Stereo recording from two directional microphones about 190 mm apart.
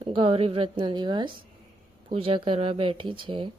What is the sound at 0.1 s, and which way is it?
Speech, 30° right (ahead or behind).